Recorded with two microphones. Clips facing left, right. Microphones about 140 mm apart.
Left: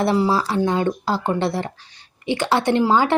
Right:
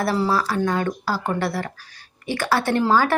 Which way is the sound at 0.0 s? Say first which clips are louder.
Left 3 dB; 20° left (ahead or behind).